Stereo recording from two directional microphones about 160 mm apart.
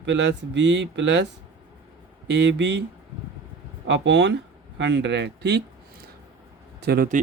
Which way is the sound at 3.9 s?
90° right.